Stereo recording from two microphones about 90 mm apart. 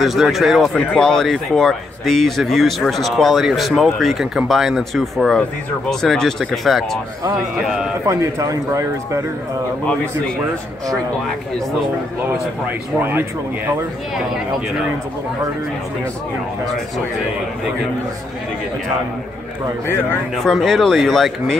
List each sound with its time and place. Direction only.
0.0 s a man's voice: centre (ahead or behind)
0.7 s a man's voice: 10° left (ahead or behind)
8.1 s speech: 40° right (ahead or behind)
12.6 s speech: 25° right (ahead or behind)
20.3 s a man's voice: centre (ahead or behind)